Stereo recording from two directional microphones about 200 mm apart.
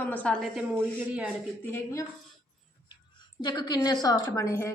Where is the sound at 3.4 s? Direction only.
20° left (ahead or behind).